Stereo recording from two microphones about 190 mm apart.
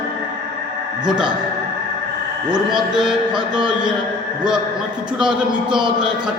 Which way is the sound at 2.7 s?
5° right (ahead or behind).